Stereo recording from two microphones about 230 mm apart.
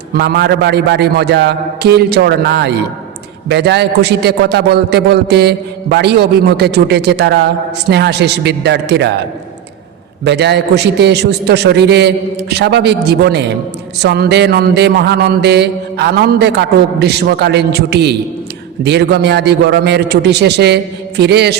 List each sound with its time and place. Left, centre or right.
0.1 s mantra: right
10.2 s mantra: right